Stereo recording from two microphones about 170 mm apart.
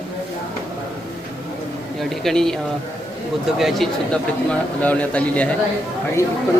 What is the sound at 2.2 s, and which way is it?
Speech, 5° left (ahead or behind).